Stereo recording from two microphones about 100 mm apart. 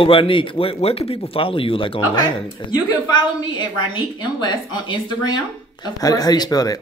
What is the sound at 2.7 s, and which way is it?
A woman's voice, 50° left (ahead or behind).